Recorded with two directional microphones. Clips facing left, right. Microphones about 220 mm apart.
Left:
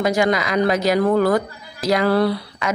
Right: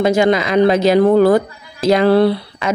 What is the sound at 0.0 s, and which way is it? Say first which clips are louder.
Speech: right 5 dB; 25° right (ahead or behind).